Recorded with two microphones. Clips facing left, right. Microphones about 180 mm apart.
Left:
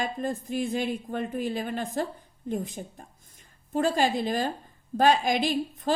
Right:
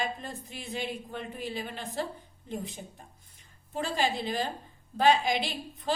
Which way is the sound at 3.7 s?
45° left (ahead or behind).